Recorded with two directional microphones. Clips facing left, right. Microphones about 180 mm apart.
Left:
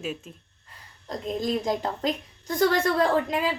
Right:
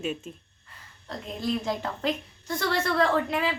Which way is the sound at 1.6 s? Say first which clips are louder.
Left 3 dB; 40° left (ahead or behind).